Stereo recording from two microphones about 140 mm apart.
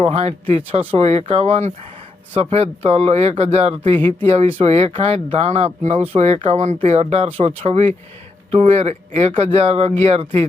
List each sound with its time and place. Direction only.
0.0 s speech: 45° right (ahead or behind)